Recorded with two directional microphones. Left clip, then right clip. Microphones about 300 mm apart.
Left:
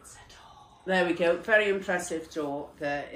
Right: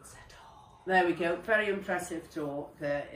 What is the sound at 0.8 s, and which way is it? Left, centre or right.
Speech, left.